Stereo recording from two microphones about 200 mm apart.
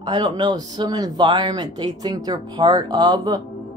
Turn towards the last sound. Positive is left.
turn(degrees=-20)  # may be behind; listen again after turning